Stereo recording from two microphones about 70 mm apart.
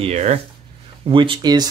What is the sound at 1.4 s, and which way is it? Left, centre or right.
Speech, right.